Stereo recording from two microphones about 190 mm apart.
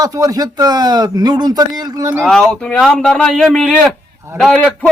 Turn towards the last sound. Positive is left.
turn(degrees=5)  # may be behind; listen again after turning